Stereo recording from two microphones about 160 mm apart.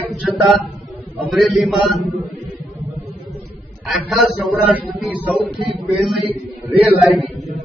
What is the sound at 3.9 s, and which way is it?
A man's voice, centre (ahead or behind).